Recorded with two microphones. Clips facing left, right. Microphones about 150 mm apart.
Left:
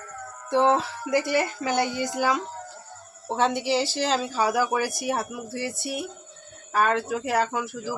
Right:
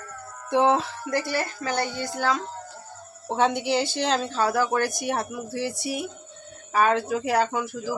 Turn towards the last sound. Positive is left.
turn(degrees=0)  # may be behind; listen again after turning